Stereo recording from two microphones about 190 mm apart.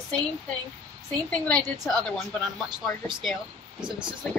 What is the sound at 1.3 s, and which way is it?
Speech, 5° left (ahead or behind).